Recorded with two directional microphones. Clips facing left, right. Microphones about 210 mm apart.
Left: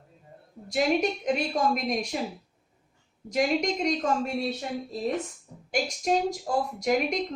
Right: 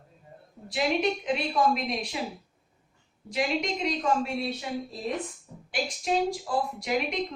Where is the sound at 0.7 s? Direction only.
45° left (ahead or behind).